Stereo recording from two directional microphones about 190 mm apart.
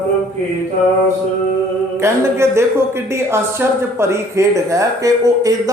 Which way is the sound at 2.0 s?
15° right (ahead or behind).